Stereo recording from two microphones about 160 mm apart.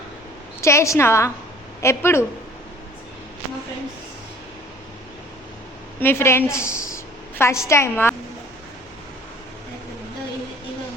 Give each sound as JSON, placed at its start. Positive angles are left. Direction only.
{"t": 0.6, "sound": "a woman's voice", "side_deg": 20}
{"t": 6.0, "sound": "a woman's voice", "side_deg": 15}